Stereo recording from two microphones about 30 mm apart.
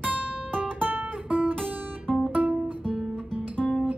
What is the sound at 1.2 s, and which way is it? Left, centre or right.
Guitar, right.